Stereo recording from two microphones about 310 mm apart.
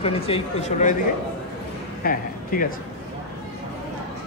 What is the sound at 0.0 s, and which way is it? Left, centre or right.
Speech, centre.